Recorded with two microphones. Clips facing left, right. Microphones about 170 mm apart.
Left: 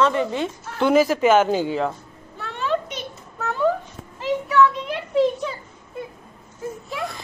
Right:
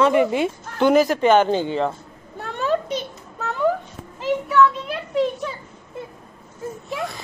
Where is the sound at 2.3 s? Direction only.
45° right (ahead or behind).